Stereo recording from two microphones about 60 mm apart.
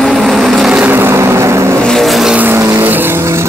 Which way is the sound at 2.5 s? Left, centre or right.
Right.